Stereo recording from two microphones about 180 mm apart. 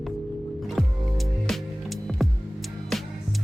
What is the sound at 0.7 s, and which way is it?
Music, centre (ahead or behind).